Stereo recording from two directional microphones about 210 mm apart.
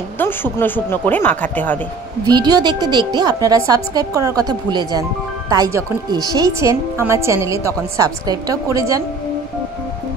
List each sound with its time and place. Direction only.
0.2 s speech: 10° left (ahead or behind)
2.2 s a woman's voice: 20° right (ahead or behind)